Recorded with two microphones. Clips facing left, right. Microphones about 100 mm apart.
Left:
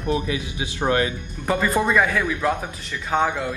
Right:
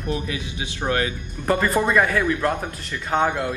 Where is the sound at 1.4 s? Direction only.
Centre (ahead or behind).